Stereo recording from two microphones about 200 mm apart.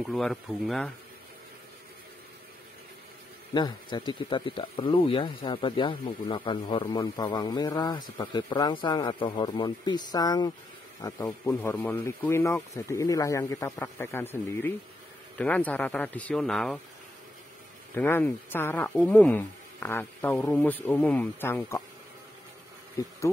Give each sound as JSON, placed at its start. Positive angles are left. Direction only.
{"t": 0.0, "sound": "speech", "side_deg": 0}
{"t": 3.5, "sound": "speech", "side_deg": 20}
{"t": 17.9, "sound": "speech", "side_deg": 10}
{"t": 23.0, "sound": "speech", "side_deg": 15}